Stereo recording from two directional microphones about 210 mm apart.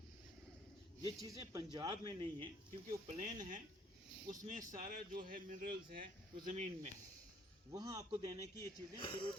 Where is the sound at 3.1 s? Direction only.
40° right (ahead or behind).